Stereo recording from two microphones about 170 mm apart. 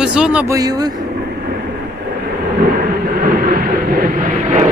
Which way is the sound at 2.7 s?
55° right (ahead or behind).